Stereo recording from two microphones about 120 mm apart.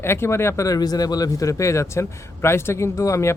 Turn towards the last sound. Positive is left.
turn(degrees=25)  # may be behind; listen again after turning